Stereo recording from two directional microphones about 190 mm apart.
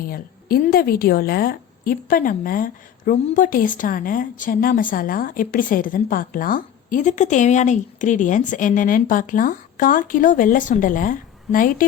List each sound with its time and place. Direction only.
0.0 s a woman's voice: 50° left (ahead or behind)